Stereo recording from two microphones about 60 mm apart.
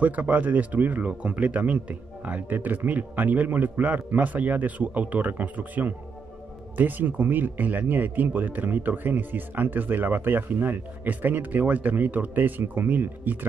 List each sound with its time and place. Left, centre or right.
0.0 s speech: right